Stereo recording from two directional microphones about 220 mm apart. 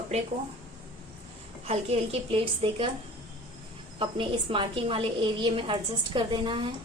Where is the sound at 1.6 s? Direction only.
30° right (ahead or behind).